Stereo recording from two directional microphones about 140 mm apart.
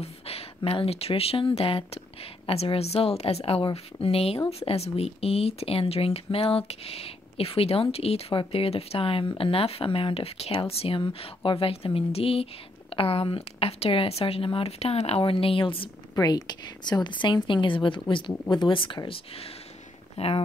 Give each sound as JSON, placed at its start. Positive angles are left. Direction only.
{"t": 0.0, "sound": "a sound", "side_deg": 45}
{"t": 0.6, "sound": "speech", "side_deg": 40}
{"t": 16.2, "sound": "a woman's voice", "side_deg": 25}